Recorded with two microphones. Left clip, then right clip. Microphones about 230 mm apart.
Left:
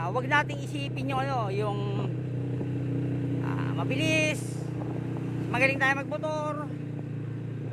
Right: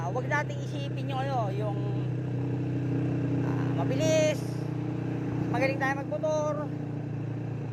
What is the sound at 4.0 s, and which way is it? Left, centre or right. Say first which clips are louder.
Speech: right 2 dB; left.